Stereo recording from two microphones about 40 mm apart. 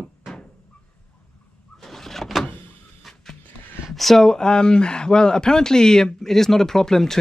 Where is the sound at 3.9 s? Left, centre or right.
Centre.